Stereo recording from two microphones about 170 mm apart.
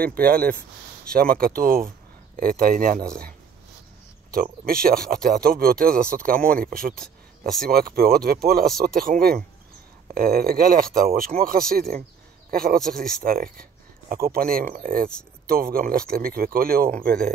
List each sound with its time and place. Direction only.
0.0 s speech: 60° right (ahead or behind)
4.3 s speech: 60° right (ahead or behind)
7.0 s a sound: centre (ahead or behind)
7.6 s speech: 60° right (ahead or behind)